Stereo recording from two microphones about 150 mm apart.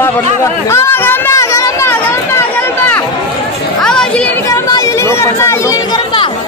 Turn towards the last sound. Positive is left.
turn(degrees=20)  # may be behind; listen again after turning